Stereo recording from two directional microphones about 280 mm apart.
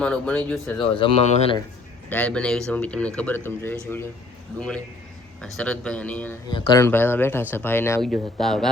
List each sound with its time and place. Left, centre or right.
0.0 s speech: centre
0.8 s speech: centre
2.0 s speech: centre
5.4 s speech: centre